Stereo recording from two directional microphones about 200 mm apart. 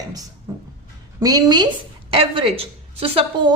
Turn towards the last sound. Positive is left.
turn(degrees=-30)  # may be behind; listen again after turning